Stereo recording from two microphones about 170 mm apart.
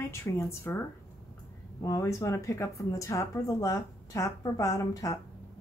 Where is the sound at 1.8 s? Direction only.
20° left (ahead or behind).